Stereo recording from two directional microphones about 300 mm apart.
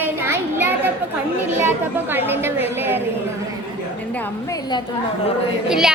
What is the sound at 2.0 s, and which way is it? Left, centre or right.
A woman's voice, centre.